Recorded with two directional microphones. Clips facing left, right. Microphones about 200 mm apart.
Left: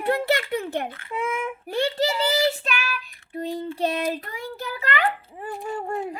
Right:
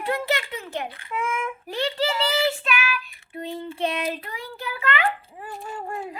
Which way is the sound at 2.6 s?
40° left (ahead or behind).